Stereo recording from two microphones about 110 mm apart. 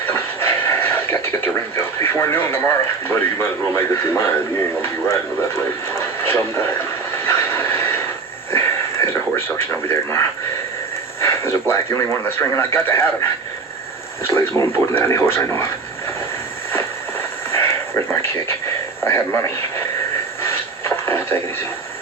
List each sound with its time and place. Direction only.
0.1 s television: 20° left (ahead or behind)
4.8 s speech: 25° left (ahead or behind)
7.3 s vehicle: 20° left (ahead or behind)
8.5 s radio: 25° left (ahead or behind)
11.7 s speech: 25° left (ahead or behind)
14.3 s speech: 25° left (ahead or behind)
17.5 s a sound: 25° left (ahead or behind)
19.0 s speech: 25° left (ahead or behind)
20.4 s a sound: 25° left (ahead or behind)